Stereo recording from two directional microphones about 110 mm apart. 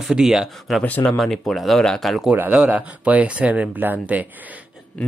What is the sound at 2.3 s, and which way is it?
Speech, 10° right (ahead or behind).